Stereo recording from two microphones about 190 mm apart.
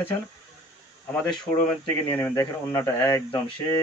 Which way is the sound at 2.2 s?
15° left (ahead or behind).